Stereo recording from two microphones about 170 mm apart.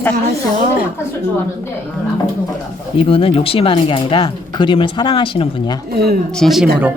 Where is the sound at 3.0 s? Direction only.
35° left (ahead or behind).